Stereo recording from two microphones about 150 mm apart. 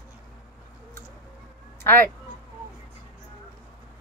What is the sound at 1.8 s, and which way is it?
Speech, 15° left (ahead or behind).